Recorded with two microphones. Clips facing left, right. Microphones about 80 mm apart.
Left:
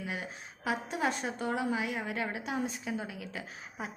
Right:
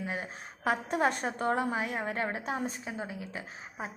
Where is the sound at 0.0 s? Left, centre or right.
Right.